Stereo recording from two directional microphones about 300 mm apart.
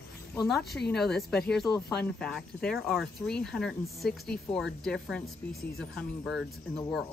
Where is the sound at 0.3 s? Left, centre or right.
Centre.